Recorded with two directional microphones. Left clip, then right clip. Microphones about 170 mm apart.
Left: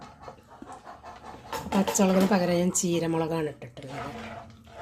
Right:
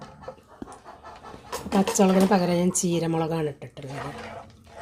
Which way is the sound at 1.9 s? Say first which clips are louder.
Right 3 dB; 25° right (ahead or behind).